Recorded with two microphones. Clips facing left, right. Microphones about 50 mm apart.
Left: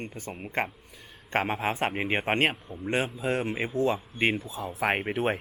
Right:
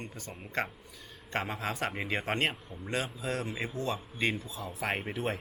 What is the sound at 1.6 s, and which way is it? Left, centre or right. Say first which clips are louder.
Speech: left 6 dB; left.